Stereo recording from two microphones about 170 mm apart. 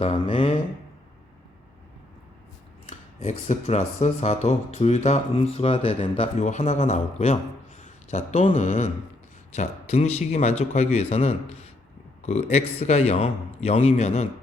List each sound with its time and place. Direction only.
0.0 s speech: 30° left (ahead or behind)
2.9 s speech: 40° left (ahead or behind)